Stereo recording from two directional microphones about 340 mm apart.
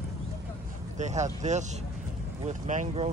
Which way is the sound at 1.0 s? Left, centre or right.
Right.